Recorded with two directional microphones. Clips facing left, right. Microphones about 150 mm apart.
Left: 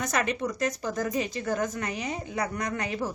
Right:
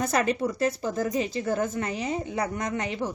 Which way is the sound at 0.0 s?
35° right (ahead or behind).